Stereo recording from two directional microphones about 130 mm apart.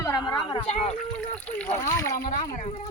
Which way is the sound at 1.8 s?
20° left (ahead or behind).